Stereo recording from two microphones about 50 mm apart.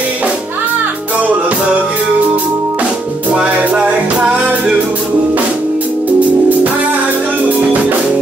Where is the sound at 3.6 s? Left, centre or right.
Right.